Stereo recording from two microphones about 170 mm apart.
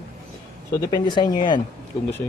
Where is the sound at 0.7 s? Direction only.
20° left (ahead or behind).